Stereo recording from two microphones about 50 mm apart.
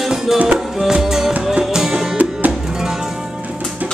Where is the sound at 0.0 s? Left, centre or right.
Centre.